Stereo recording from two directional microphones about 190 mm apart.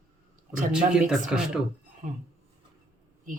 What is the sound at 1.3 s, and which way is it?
Speech, 5° right (ahead or behind).